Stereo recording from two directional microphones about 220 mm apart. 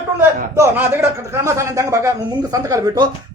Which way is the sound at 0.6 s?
10° right (ahead or behind).